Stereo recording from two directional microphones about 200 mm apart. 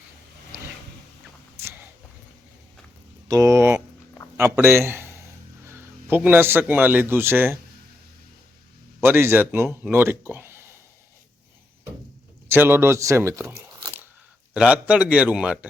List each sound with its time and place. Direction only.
3.2 s a man's voice: 15° right (ahead or behind)
9.0 s speech: 10° right (ahead or behind)
12.5 s speech: 10° right (ahead or behind)
13.7 s a sound: 15° right (ahead or behind)
14.5 s a man's voice: 5° right (ahead or behind)